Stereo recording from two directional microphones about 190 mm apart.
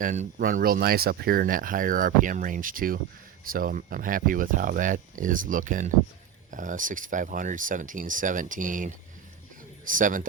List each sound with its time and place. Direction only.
0.0 s speech: 40° right (ahead or behind)
9.9 s speech: 45° right (ahead or behind)